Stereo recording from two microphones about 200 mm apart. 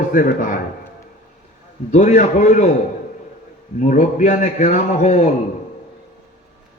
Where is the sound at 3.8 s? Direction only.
40° left (ahead or behind).